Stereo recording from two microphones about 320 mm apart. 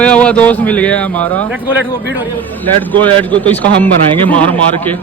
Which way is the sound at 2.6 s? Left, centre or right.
Centre.